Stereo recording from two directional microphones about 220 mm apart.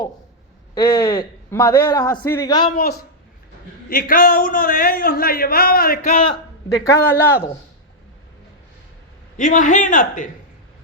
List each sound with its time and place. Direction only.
0.7 s a man's voice: 15° left (ahead or behind)
2.7 s a woman's voice: 45° left (ahead or behind)
6.1 s a man's voice: 25° left (ahead or behind)
6.8 s a man's voice: 10° left (ahead or behind)
9.4 s a man's voice: 35° left (ahead or behind)